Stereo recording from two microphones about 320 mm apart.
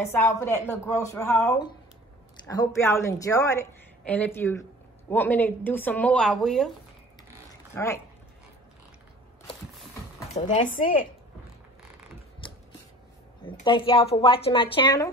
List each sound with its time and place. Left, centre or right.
0.0 s a woman's voice: centre
7.7 s speech: centre
10.3 s speech: left
12.4 s scissors: centre
13.5 s a woman's voice: centre